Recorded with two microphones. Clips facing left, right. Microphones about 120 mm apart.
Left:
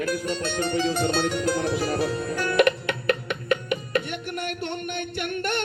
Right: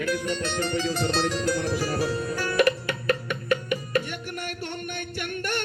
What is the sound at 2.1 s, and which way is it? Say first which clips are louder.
Music: left 3 dB; 50° left (ahead or behind).